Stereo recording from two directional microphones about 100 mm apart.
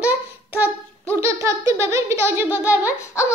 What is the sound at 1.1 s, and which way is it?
Laughter, 30° right (ahead or behind).